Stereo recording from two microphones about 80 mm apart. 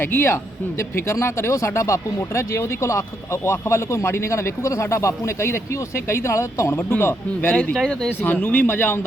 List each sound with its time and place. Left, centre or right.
0.0 s speech: left
7.5 s speech: centre
8.2 s speech: left